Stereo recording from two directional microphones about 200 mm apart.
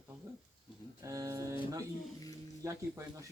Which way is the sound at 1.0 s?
15° right (ahead or behind).